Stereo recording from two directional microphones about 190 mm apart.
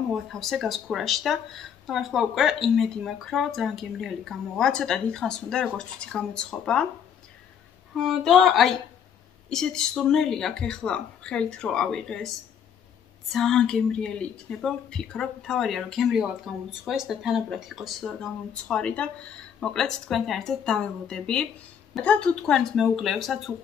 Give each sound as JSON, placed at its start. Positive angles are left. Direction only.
{"t": 0.1, "sound": "speech", "side_deg": 0}
{"t": 7.9, "sound": "speech", "side_deg": 0}
{"t": 13.3, "sound": "speech", "side_deg": 0}